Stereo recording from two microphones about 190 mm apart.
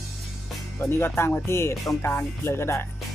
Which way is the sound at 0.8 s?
15° left (ahead or behind).